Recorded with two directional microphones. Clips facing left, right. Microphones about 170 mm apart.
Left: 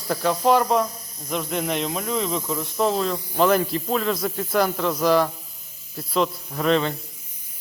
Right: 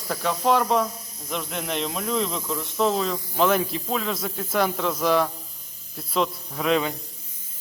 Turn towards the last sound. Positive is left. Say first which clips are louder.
# left 2 dB
turn(degrees=-5)  # may be behind; listen again after turning